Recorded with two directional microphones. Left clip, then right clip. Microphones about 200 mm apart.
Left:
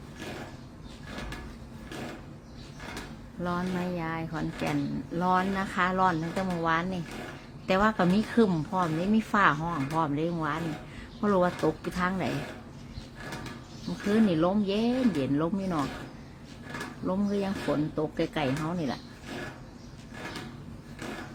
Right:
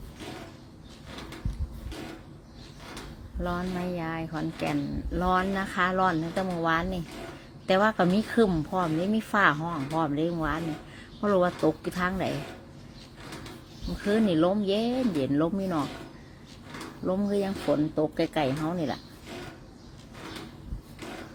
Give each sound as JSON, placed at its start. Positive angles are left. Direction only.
{"t": 3.4, "sound": "speech", "side_deg": -10}
{"t": 14.1, "sound": "speech", "side_deg": -15}
{"t": 17.1, "sound": "speech", "side_deg": -15}